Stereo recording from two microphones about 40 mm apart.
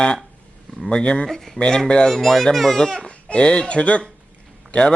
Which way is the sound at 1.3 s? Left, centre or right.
Centre.